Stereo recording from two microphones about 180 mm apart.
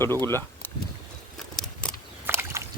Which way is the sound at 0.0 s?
15° left (ahead or behind).